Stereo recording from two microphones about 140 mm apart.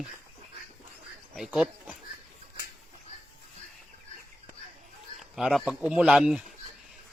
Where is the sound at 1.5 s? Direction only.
10° right (ahead or behind).